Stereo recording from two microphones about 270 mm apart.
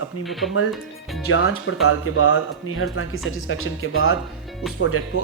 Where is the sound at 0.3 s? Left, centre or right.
Centre.